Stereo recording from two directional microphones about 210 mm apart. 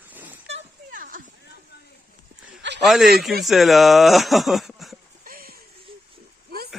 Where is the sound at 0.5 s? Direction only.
40° right (ahead or behind).